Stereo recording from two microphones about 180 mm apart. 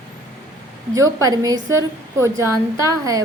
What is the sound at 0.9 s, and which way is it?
A woman's voice, 15° right (ahead or behind).